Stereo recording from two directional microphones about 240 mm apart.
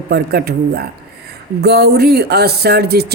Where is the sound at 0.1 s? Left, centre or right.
Right.